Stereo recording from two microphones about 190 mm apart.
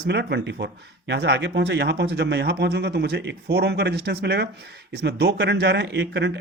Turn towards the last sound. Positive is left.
turn(degrees=-65)  # may be behind; listen again after turning